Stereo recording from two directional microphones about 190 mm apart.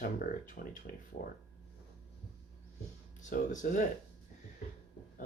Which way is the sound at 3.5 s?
40° left (ahead or behind).